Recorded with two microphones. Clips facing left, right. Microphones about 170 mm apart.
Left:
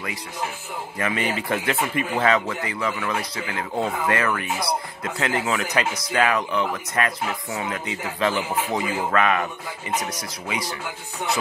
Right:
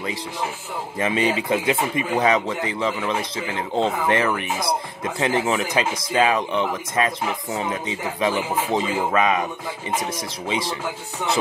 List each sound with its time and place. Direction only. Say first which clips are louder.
0.9 s speech: right 4 dB; 20° right (ahead or behind)